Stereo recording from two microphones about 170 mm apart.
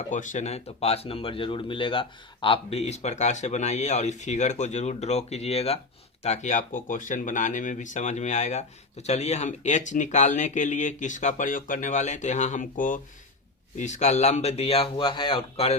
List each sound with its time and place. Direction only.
0.1 s speech: 45° left (ahead or behind)